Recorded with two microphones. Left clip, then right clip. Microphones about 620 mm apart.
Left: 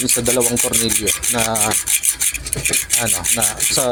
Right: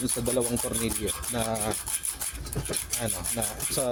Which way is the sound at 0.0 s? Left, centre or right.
Right.